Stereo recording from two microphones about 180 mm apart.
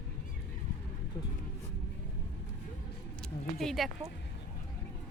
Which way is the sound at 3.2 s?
Centre (ahead or behind).